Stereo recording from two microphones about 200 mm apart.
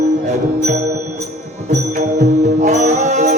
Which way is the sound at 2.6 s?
35° right (ahead or behind).